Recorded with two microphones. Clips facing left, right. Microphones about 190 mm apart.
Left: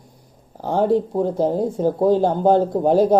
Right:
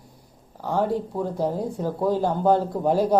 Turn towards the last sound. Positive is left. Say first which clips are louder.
# left 5 dB
turn(degrees=25)  # may be behind; listen again after turning